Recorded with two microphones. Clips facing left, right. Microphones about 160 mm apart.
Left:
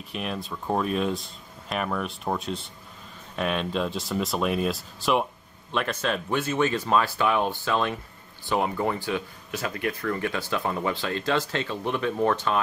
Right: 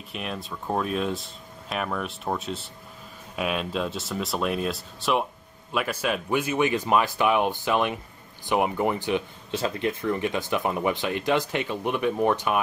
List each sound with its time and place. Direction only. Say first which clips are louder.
0.1 s speech: left 2 dB; centre (ahead or behind)